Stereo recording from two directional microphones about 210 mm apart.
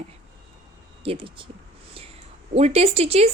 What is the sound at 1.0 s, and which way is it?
Speech, 25° right (ahead or behind).